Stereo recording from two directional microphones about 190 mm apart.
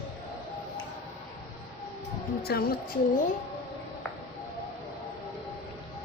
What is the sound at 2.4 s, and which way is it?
Speech, 55° left (ahead or behind).